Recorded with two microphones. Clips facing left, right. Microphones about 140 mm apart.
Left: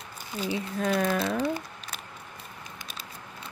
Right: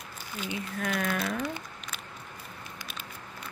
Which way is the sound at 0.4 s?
30° left (ahead or behind).